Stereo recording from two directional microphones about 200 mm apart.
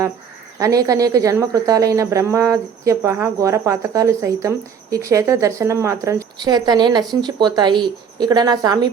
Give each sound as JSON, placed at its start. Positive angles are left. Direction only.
{"t": 0.6, "sound": "speech", "side_deg": -15}